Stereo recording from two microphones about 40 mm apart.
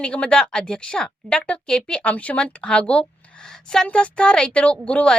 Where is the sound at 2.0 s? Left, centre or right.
Left; by 3.8 s centre.